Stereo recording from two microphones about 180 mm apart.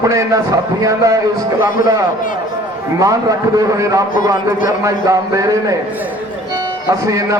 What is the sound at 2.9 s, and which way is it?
A man's voice, 20° right (ahead or behind).